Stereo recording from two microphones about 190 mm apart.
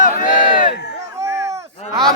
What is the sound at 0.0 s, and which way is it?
Crowd, 45° left (ahead or behind).